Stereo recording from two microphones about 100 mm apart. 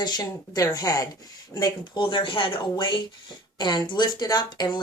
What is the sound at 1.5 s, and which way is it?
A woman's voice, 50° left (ahead or behind).